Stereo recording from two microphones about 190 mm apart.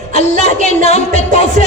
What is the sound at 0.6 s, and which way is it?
Speech, 35° left (ahead or behind).